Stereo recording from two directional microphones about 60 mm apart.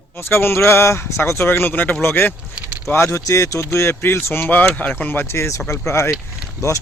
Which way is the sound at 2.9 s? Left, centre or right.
Left.